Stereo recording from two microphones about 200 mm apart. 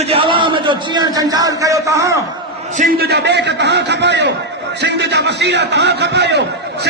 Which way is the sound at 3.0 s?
55° right (ahead or behind).